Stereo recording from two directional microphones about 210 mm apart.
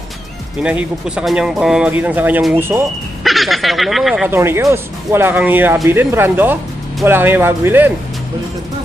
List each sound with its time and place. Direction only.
0.6 s speech: 5° right (ahead or behind)
4.4 s speech: 15° right (ahead or behind)